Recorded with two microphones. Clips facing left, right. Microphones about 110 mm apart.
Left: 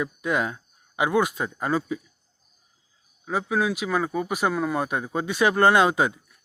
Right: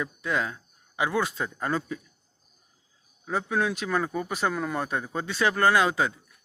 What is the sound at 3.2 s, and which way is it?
Speech, 5° left (ahead or behind).